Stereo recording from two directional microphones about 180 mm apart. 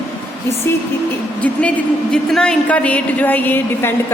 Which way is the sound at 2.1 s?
5° left (ahead or behind).